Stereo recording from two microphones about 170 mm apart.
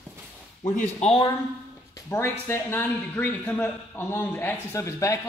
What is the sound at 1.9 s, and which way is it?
Speech, 15° left (ahead or behind).